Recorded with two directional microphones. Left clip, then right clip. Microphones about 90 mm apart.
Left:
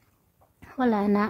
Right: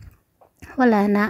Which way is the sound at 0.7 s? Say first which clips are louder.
Right 6 dB; 40° right (ahead or behind).